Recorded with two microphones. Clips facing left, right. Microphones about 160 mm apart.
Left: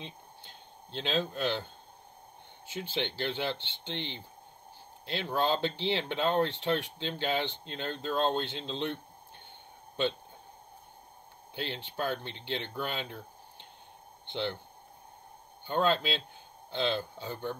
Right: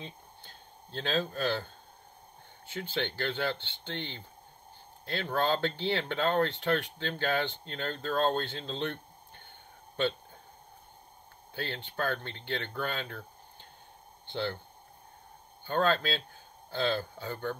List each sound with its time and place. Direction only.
0.0 s a sound: 20° left (ahead or behind)
1.3 s speech: 20° left (ahead or behind)
2.9 s speech: 20° left (ahead or behind)
11.5 s speech: 20° left (ahead or behind)
15.6 s speech: 20° left (ahead or behind)